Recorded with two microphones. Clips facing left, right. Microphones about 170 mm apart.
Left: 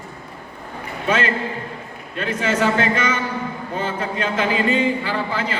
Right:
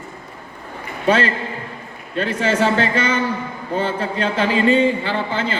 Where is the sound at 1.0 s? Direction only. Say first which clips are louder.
Right 3 dB; 35° right (ahead or behind).